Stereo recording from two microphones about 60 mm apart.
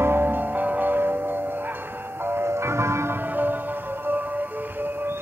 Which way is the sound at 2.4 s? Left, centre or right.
Right.